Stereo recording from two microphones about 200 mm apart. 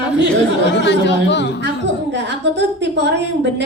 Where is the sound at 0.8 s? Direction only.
60° left (ahead or behind).